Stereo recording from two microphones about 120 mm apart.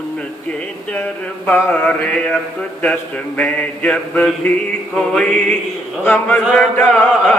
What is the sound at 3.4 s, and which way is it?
Chant, 10° left (ahead or behind).